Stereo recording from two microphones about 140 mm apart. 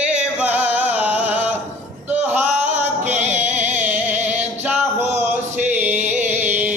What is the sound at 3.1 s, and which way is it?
Music, 55° right (ahead or behind).